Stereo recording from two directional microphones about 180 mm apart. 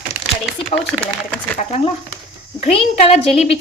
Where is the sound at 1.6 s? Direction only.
35° left (ahead or behind).